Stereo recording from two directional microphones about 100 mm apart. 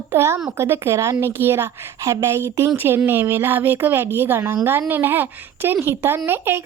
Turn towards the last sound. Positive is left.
turn(degrees=-25)  # may be behind; listen again after turning